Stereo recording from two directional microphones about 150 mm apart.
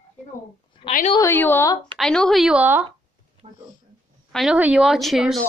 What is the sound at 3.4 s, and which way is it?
Speech, 45° right (ahead or behind).